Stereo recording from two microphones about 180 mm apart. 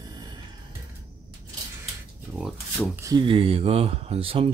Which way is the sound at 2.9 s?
15° right (ahead or behind).